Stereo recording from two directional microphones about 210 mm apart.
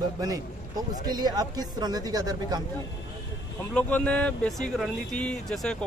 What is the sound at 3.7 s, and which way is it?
Speech, 5° left (ahead or behind).